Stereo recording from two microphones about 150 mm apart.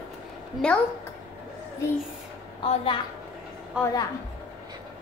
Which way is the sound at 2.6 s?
40° left (ahead or behind).